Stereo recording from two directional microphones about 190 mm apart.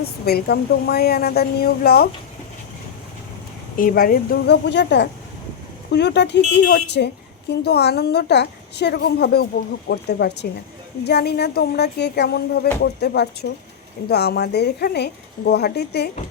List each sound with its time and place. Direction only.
0.0 s a woman's voice: 55° left (ahead or behind)
3.8 s a woman's voice: 50° left (ahead or behind)